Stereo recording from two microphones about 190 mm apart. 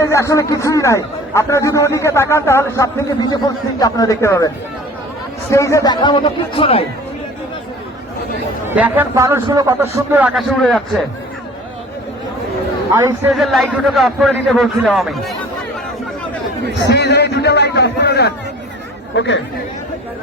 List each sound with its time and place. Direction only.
0.0 s a man's voice: 15° left (ahead or behind)
8.6 s a man's voice: 10° right (ahead or behind)
10.6 s a man's voice: 5° left (ahead or behind)
12.9 s a man's voice: 15° right (ahead or behind)
13.3 s a man's voice: centre (ahead or behind)
16.9 s a man's voice: 60° left (ahead or behind)
19.1 s speech: 70° left (ahead or behind)